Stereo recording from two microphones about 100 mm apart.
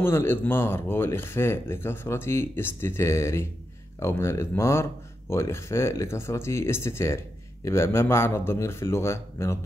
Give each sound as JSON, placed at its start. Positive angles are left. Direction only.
{"t": 0.0, "sound": "speech", "side_deg": 25}